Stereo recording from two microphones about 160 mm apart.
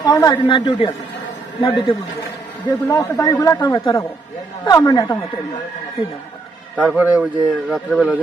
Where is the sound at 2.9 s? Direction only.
20° left (ahead or behind).